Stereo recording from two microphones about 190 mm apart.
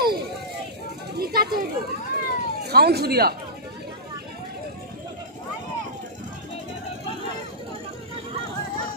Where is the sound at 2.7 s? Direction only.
55° right (ahead or behind).